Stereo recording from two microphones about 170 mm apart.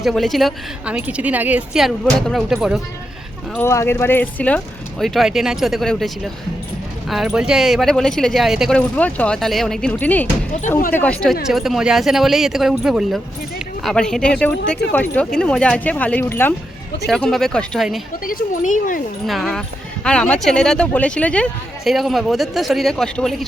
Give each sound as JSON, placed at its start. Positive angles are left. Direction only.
{"t": 0.0, "sound": "speech", "side_deg": 0}
{"t": 3.5, "sound": "speech", "side_deg": 15}
{"t": 18.3, "sound": "speech", "side_deg": 55}
{"t": 19.3, "sound": "speech", "side_deg": 0}